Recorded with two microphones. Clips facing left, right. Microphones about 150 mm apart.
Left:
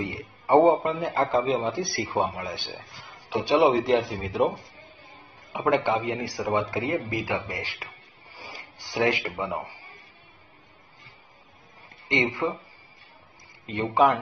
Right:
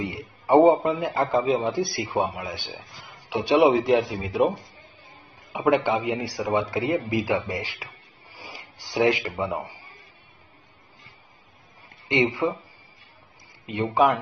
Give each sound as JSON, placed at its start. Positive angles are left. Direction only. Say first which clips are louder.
{"t": 0.0, "sound": "a man's voice", "louder": "right 1 dB", "side_deg": -15}
{"t": 3.1, "sound": "a sound", "louder": "right 1 dB", "side_deg": -10}
{"t": 3.6, "sound": "a man's voice", "louder": "right 3 dB", "side_deg": 0}
{"t": 8.4, "sound": "a sound", "louder": "even", "side_deg": -10}
{"t": 9.4, "sound": "speech", "louder": "right 2 dB", "side_deg": -15}
{"t": 12.1, "sound": "speech", "louder": "right 3 dB", "side_deg": -15}
{"t": 13.7, "sound": "speech", "louder": "right 1 dB", "side_deg": -5}